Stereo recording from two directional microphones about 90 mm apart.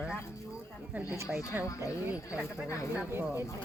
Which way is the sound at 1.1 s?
25° right (ahead or behind).